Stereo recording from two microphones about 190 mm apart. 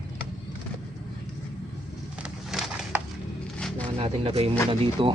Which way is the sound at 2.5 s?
Centre (ahead or behind).